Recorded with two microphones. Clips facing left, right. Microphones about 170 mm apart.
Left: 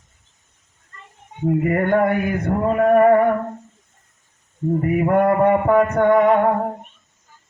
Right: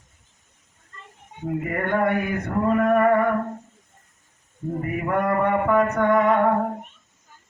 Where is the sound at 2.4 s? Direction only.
35° left (ahead or behind).